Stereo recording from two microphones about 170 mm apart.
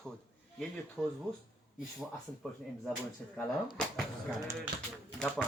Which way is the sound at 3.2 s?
5° left (ahead or behind).